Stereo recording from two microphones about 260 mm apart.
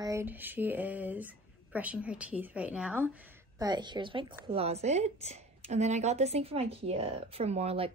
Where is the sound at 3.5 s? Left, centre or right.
Centre.